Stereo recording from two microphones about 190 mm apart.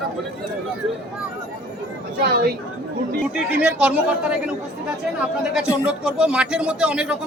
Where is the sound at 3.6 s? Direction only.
5° right (ahead or behind).